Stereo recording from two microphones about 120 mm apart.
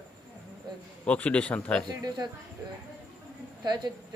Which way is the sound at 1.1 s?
10° left (ahead or behind).